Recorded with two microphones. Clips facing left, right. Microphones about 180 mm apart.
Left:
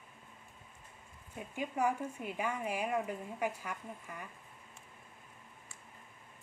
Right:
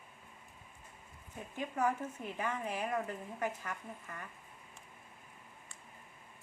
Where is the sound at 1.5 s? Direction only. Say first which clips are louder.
Left 1 dB; 10° left (ahead or behind).